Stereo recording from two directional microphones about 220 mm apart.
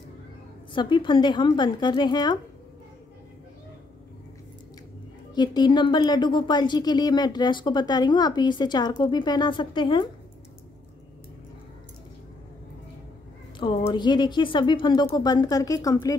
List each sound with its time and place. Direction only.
0.7 s speech: 20° left (ahead or behind)
5.3 s speech: 20° left (ahead or behind)
13.6 s speech: 20° left (ahead or behind)